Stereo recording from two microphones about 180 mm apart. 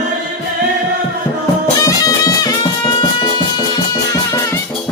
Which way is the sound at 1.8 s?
20° left (ahead or behind).